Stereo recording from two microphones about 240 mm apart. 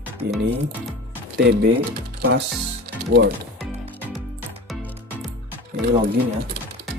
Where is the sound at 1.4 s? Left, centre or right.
Right.